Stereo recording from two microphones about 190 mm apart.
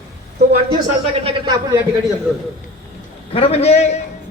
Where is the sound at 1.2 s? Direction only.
20° right (ahead or behind).